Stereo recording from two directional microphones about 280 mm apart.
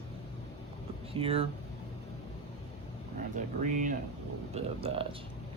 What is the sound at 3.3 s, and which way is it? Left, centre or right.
Speech, right.